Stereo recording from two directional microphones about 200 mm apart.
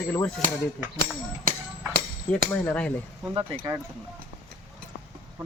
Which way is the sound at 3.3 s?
20° right (ahead or behind).